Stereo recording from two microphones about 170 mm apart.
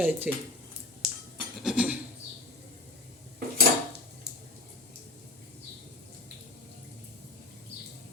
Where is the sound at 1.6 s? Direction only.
5° right (ahead or behind).